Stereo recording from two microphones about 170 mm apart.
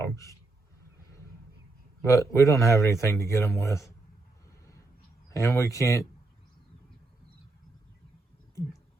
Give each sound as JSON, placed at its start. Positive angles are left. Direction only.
{"t": 0.0, "sound": "a sound", "side_deg": 20}
{"t": 2.0, "sound": "speech", "side_deg": 20}
{"t": 5.3, "sound": "speech", "side_deg": 20}